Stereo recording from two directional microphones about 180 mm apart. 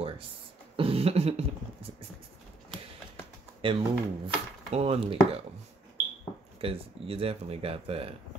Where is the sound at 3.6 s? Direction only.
30° right (ahead or behind).